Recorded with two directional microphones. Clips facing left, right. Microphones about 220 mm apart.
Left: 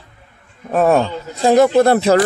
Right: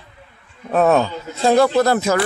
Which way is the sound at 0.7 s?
10° left (ahead or behind).